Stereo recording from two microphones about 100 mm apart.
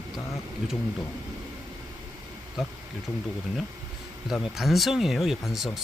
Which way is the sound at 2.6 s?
5° right (ahead or behind).